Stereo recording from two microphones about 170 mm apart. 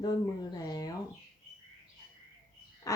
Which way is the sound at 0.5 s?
20° left (ahead or behind).